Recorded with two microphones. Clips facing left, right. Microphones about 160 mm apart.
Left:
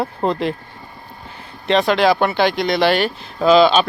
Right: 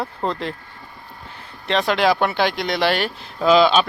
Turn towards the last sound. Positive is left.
turn(degrees=-5)  # may be behind; listen again after turning